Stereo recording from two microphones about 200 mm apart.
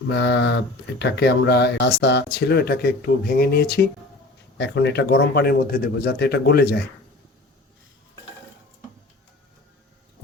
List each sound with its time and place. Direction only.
0.1 s speech: 60° left (ahead or behind)